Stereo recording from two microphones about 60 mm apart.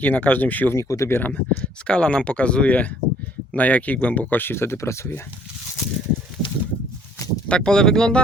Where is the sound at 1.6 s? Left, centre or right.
Centre.